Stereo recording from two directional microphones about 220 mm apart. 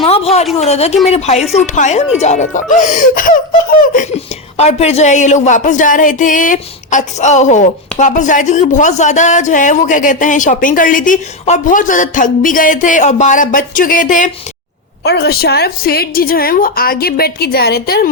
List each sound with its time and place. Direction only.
0.0 s a sound: 25° left (ahead or behind)
0.6 s speech: 30° left (ahead or behind)
15.0 s a woman's voice: 50° left (ahead or behind)